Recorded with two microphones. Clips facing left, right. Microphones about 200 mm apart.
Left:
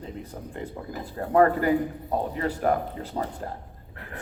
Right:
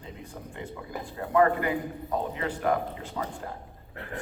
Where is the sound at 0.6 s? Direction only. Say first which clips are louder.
Left 2 dB; 40° left (ahead or behind).